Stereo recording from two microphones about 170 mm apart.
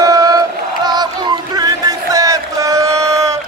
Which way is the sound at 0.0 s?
20° right (ahead or behind).